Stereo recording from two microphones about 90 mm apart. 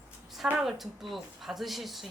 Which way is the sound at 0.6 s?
Centre (ahead or behind).